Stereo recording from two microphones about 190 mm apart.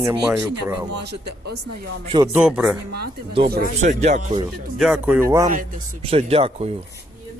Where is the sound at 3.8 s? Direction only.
35° right (ahead or behind).